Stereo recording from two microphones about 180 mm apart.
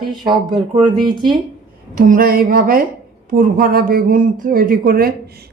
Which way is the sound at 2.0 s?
50° right (ahead or behind).